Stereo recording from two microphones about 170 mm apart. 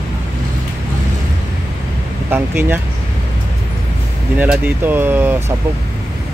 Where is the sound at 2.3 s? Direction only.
15° right (ahead or behind).